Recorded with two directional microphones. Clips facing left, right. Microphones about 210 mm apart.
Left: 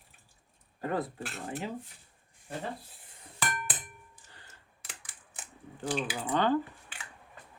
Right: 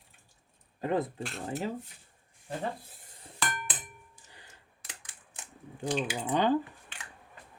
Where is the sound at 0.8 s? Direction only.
20° right (ahead or behind).